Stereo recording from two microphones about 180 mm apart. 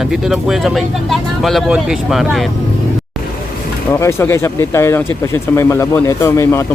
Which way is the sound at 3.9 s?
15° left (ahead or behind).